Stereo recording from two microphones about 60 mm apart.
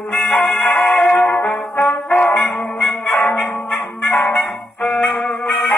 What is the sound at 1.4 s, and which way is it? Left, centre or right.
Brass instrument, left.